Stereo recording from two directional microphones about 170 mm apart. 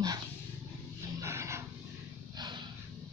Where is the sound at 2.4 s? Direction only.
25° right (ahead or behind).